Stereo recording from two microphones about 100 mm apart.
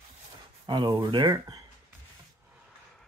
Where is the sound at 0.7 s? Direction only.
50° right (ahead or behind).